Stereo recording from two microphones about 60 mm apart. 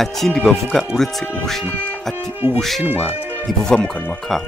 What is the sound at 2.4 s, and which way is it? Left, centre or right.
Speech, right.